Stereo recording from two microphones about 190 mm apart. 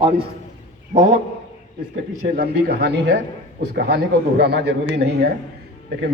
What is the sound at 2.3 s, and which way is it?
Speech, 60° right (ahead or behind).